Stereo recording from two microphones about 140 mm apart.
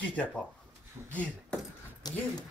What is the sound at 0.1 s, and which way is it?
Speech, 10° left (ahead or behind).